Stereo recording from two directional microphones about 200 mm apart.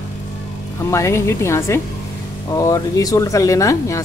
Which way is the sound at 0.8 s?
15° left (ahead or behind).